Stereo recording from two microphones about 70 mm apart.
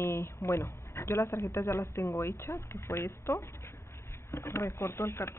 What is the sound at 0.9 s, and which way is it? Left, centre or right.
Speech, left.